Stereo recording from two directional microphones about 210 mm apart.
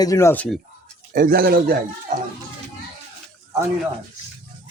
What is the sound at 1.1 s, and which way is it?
Speech, 45° right (ahead or behind).